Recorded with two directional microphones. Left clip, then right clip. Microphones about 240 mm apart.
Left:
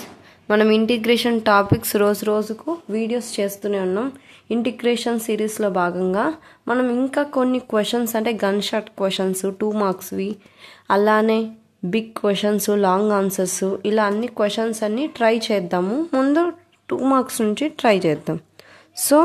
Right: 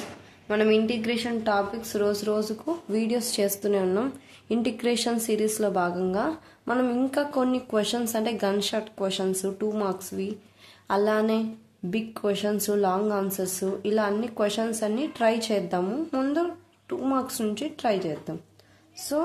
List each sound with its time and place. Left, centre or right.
0.5 s speech: left
2.6 s a woman's voice: centre; by 18.4 s left